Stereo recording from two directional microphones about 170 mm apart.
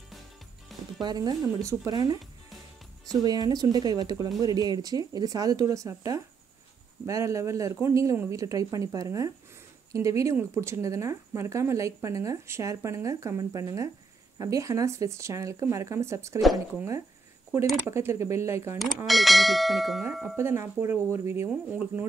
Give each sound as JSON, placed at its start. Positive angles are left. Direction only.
{"t": 0.7, "sound": "music", "side_deg": 0}
{"t": 1.0, "sound": "speech", "side_deg": -25}
{"t": 19.0, "sound": "bell", "side_deg": 0}
{"t": 20.3, "sound": "speech", "side_deg": -15}